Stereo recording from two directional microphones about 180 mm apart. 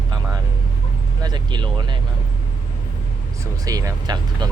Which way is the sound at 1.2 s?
25° right (ahead or behind).